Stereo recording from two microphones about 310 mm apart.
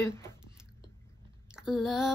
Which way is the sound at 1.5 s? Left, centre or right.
Centre.